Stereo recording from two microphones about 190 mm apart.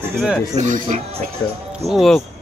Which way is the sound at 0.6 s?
40° right (ahead or behind).